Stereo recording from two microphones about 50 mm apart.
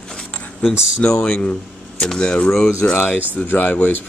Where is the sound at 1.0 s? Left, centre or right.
Centre.